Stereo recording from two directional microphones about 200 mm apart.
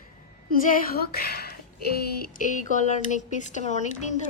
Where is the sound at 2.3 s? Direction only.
40° left (ahead or behind).